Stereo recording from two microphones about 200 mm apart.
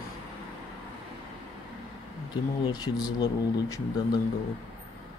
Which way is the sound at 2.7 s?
20° left (ahead or behind).